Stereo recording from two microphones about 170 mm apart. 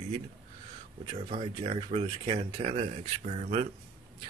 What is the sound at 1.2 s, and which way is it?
Speech, 40° right (ahead or behind).